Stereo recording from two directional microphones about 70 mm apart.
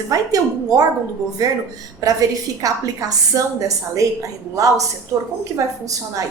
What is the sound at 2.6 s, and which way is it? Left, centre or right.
A woman's voice, right.